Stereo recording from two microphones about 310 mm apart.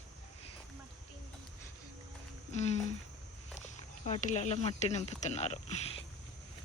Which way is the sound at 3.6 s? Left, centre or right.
Left.